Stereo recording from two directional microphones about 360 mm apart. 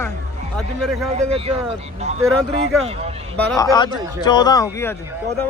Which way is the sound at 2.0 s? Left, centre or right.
Centre.